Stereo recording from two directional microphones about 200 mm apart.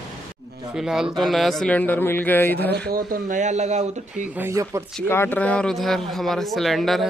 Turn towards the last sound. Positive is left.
turn(degrees=0)  # may be behind; listen again after turning